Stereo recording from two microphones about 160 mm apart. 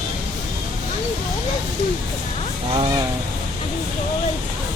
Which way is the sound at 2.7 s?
30° right (ahead or behind).